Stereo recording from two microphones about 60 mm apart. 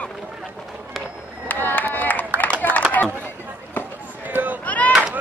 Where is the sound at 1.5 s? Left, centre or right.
Left.